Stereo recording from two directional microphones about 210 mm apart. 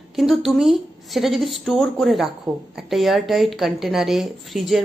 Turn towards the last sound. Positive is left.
turn(degrees=0)  # may be behind; listen again after turning